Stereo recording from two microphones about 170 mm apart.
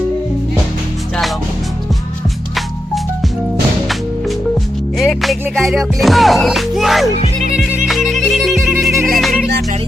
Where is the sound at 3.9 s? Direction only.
Centre (ahead or behind).